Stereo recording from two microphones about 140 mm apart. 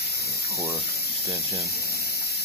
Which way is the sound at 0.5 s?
20° right (ahead or behind).